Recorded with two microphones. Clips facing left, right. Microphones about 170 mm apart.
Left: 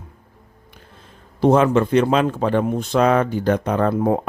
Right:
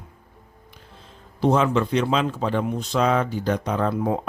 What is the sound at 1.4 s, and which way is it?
Speech, 50° left (ahead or behind).